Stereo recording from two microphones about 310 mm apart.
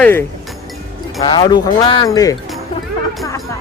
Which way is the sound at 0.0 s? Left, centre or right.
Centre.